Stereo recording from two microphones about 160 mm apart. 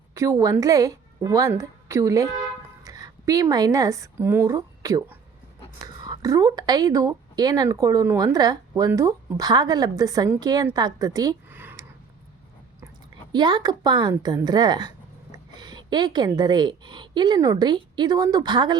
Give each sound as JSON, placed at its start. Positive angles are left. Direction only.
{"t": 0.1, "sound": "a woman's voice", "side_deg": -20}
{"t": 11.4, "sound": "a sound", "side_deg": -15}
{"t": 13.3, "sound": "a woman's voice", "side_deg": -25}